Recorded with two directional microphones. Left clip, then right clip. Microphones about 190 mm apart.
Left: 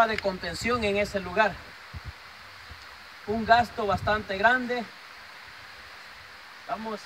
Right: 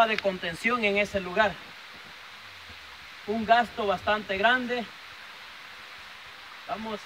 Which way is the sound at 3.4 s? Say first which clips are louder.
Left 1 dB; centre (ahead or behind).